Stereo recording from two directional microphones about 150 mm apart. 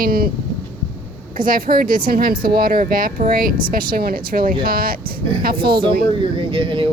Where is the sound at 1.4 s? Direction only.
70° right (ahead or behind).